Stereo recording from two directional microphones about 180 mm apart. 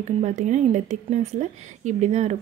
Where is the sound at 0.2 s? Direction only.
40° right (ahead or behind).